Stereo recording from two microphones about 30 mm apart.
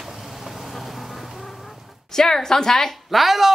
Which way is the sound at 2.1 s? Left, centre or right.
Centre.